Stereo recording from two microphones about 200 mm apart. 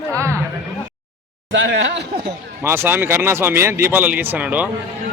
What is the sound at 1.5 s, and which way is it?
Speech, 70° right (ahead or behind).